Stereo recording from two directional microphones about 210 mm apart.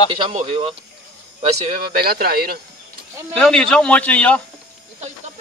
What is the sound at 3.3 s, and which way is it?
A man's voice, 5° left (ahead or behind).